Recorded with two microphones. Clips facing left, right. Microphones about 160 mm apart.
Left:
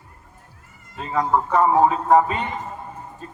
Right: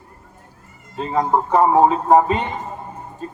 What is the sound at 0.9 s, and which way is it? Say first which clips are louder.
Speech: right 2 dB; 25° right (ahead or behind).